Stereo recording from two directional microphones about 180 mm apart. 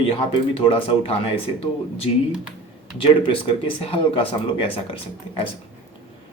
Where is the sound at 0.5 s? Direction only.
30° left (ahead or behind).